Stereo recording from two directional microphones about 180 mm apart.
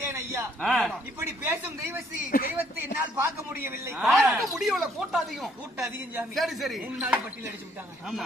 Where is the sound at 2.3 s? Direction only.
50° left (ahead or behind).